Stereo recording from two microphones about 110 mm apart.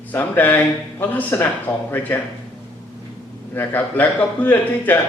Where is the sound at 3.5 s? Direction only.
15° left (ahead or behind).